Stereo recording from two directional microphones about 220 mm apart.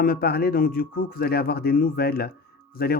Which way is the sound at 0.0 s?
45° left (ahead or behind).